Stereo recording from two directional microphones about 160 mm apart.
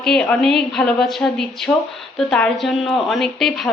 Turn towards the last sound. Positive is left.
turn(degrees=0)  # may be behind; listen again after turning